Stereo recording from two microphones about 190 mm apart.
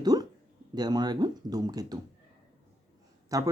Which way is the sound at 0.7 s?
20° right (ahead or behind).